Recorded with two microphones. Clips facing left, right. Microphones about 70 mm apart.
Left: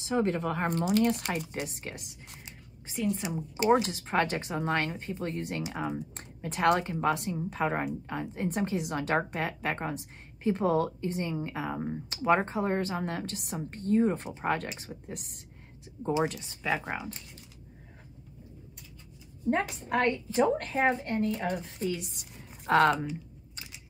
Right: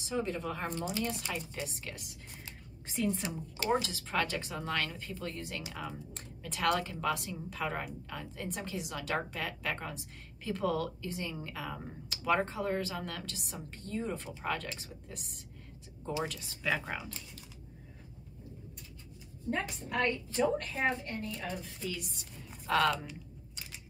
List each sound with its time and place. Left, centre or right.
0.1 s speech: left
1.5 s a woman's voice: left
2.9 s a woman's voice: centre
3.2 s speech: centre
3.8 s a woman's voice: left
8.5 s a woman's voice: left
16.0 s speech: left
16.7 s speech: centre
20.3 s a woman's voice: left
21.7 s a woman's voice: left